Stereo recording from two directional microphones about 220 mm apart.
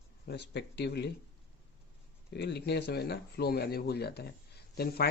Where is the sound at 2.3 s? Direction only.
50° left (ahead or behind).